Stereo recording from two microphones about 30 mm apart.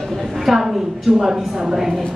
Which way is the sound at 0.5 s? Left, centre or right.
Centre.